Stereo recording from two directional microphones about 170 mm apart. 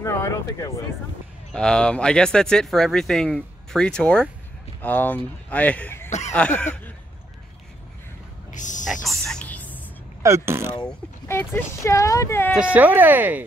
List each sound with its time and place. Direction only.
0.0 s a sound: 15° left (ahead or behind)
1.5 s speech: 5° left (ahead or behind)
6.0 s a sound: 45° left (ahead or behind)
6.3 s speech: 10° left (ahead or behind)
8.5 s a sound: 45° left (ahead or behind)
9.0 s whispering: centre (ahead or behind)
10.2 s speech: 15° right (ahead or behind)
10.9 s speech: 10° left (ahead or behind)
12.5 s speech: 10° right (ahead or behind)